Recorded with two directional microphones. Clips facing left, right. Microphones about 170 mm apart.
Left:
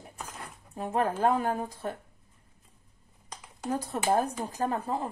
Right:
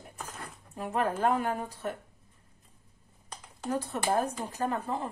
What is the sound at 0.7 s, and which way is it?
Speech, 30° left (ahead or behind).